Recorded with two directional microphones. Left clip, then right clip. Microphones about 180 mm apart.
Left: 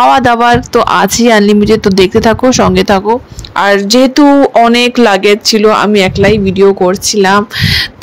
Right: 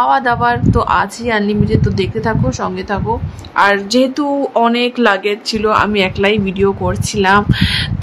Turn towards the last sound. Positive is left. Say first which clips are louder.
# left 4 dB
turn(degrees=30)  # may be behind; listen again after turning